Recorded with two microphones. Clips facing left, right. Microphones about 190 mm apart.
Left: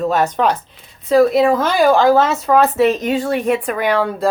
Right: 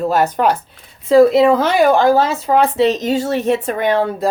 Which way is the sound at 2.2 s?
30° right (ahead or behind).